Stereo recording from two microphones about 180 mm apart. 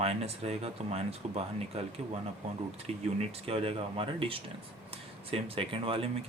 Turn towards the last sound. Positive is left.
turn(degrees=-30)  # may be behind; listen again after turning